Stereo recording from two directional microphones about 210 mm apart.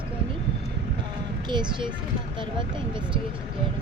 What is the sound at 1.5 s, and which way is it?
Speech, 20° right (ahead or behind).